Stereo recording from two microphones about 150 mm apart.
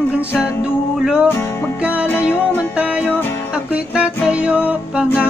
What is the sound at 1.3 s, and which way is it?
Music, 15° left (ahead or behind).